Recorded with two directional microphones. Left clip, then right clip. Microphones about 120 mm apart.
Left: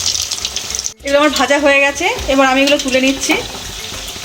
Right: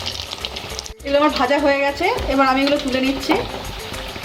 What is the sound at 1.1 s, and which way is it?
Speech, 45° left (ahead or behind).